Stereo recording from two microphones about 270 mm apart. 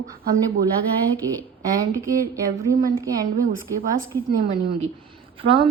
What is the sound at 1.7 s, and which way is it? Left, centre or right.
Speech, centre.